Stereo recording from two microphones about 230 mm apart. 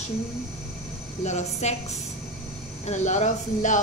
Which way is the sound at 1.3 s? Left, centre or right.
Left.